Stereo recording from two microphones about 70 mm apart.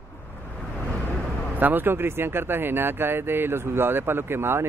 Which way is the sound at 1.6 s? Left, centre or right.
Right.